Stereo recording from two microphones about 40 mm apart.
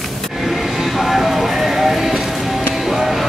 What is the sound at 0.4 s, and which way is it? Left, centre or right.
Music, centre.